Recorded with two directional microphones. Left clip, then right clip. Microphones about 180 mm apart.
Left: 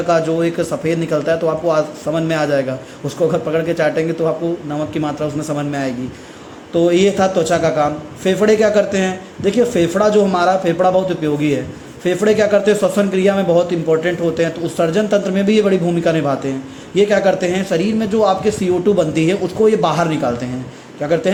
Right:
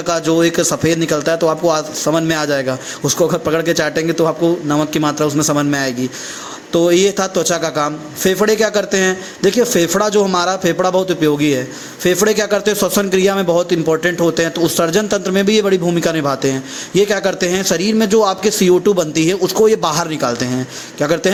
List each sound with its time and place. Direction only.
0.1 s a man's voice: 30° right (ahead or behind)